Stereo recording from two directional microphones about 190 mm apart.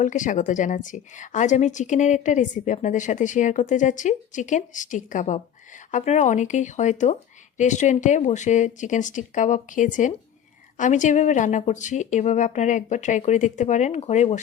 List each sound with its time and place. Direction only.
0.0 s a woman's voice: 40° left (ahead or behind)